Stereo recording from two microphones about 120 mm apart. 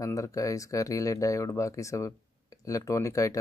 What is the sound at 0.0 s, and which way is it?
Speech, 30° left (ahead or behind).